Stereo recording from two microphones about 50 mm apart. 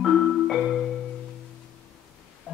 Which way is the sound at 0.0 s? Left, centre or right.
Centre.